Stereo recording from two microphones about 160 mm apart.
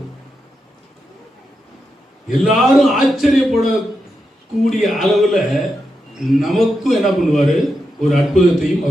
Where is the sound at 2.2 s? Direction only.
Centre (ahead or behind).